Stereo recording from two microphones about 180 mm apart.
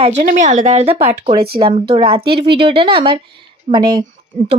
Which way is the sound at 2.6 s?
30° right (ahead or behind).